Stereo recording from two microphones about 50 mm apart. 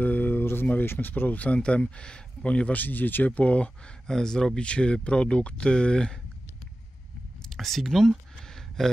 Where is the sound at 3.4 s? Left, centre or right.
Left.